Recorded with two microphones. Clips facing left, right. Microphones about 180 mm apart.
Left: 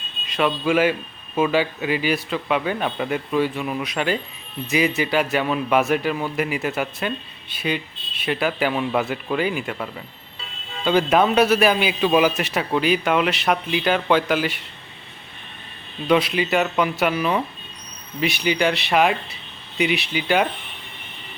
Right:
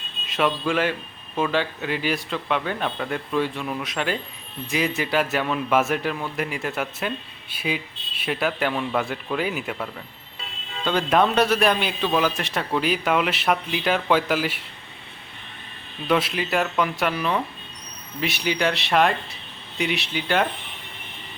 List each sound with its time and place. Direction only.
0.3 s a man's voice: centre (ahead or behind)
8.2 s a man's voice: centre (ahead or behind)
16.0 s a man's voice: centre (ahead or behind)